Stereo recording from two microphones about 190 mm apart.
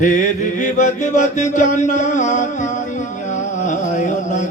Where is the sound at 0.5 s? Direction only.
40° left (ahead or behind).